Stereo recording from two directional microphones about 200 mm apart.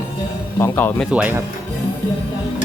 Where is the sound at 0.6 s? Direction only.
10° left (ahead or behind).